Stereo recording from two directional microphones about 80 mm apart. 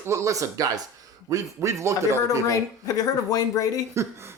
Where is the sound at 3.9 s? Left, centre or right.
Right.